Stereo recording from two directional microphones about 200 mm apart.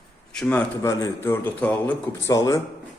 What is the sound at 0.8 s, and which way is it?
Speech, 15° left (ahead or behind).